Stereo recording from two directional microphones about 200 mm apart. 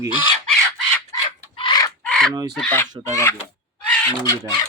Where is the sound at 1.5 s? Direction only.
25° left (ahead or behind).